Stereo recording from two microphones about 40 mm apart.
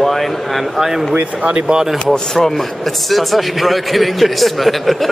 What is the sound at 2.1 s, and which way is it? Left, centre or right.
A man's voice, centre.